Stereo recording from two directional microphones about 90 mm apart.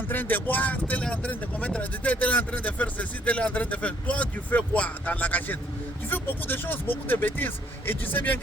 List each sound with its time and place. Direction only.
0.1 s speech: 20° left (ahead or behind)